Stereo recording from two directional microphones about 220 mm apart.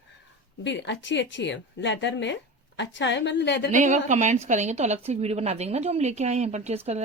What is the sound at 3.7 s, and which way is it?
A woman's voice, 35° right (ahead or behind).